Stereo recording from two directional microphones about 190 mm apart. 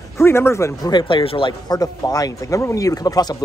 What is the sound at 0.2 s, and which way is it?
Speech, 15° left (ahead or behind).